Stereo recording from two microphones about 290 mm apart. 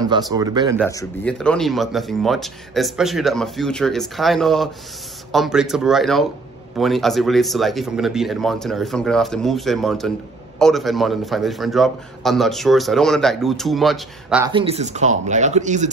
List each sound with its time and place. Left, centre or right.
0.3 s speech: centre
0.8 s speech: centre
14.4 s speech: centre